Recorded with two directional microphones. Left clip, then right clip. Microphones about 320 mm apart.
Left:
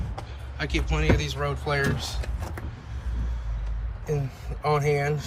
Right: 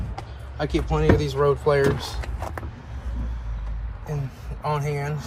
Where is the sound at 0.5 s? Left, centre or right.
Centre.